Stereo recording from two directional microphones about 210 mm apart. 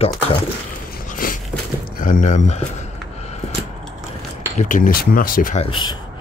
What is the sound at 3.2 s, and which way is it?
Scissors, 30° left (ahead or behind).